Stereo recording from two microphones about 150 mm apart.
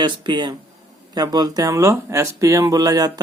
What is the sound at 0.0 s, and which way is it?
Speech, 30° right (ahead or behind).